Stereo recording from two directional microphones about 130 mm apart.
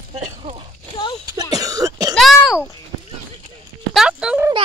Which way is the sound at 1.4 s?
30° right (ahead or behind).